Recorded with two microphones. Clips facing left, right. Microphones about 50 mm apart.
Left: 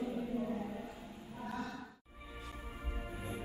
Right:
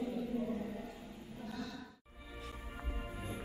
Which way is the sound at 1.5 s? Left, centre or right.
Left.